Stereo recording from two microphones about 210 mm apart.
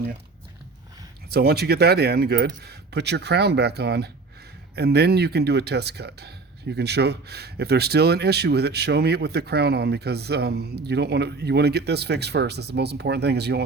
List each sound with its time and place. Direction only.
1.3 s speech: 50° right (ahead or behind)